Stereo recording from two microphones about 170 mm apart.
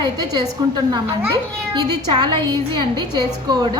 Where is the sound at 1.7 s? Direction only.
25° right (ahead or behind).